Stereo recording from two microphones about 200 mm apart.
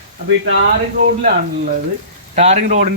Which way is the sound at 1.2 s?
40° right (ahead or behind).